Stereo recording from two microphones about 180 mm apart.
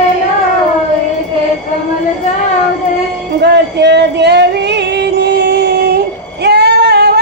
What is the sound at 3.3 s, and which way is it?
Music, 70° right (ahead or behind).